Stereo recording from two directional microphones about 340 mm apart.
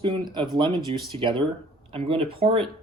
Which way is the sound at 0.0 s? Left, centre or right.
Centre.